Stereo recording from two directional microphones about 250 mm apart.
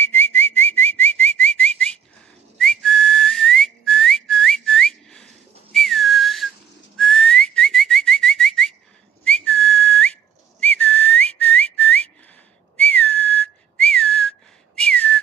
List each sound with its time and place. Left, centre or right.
0.0 s whistling: centre